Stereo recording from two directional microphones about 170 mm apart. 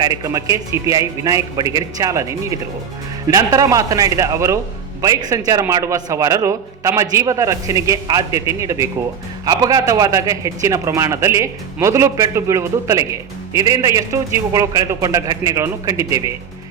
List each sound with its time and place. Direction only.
0.0 s a man's voice: 20° right (ahead or behind)